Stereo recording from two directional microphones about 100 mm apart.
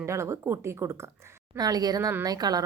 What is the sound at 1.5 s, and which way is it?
Speech, 40° right (ahead or behind).